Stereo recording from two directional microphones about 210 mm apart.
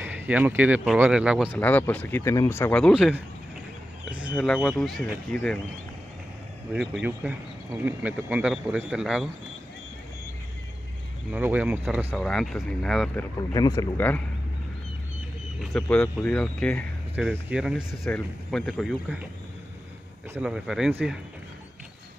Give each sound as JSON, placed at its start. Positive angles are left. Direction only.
{"t": 0.0, "sound": "speech", "side_deg": -10}
{"t": 1.5, "sound": "speech", "side_deg": 10}
{"t": 4.3, "sound": "a man's voice", "side_deg": 10}
{"t": 6.7, "sound": "a man's voice", "side_deg": -5}
{"t": 11.3, "sound": "a man's voice", "side_deg": -5}
{"t": 13.4, "sound": "speech", "side_deg": 20}
{"t": 15.6, "sound": "a man's voice", "side_deg": 0}
{"t": 20.3, "sound": "a man's voice", "side_deg": -5}